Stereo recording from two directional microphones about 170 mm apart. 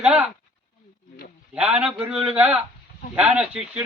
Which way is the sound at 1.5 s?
5° right (ahead or behind).